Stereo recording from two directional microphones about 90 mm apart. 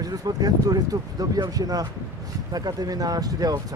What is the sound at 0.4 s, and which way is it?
Speech, 45° right (ahead or behind).